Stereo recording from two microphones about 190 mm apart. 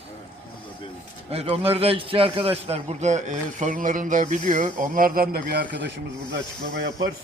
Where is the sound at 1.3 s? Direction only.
30° right (ahead or behind); by 5.9 s 55° right (ahead or behind).